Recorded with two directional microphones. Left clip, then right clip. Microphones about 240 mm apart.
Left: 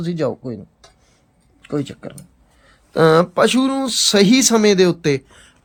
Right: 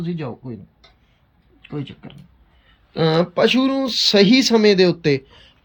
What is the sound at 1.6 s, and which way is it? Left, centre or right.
Speech, left.